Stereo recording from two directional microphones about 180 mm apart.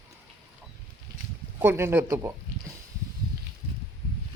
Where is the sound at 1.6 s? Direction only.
15° right (ahead or behind).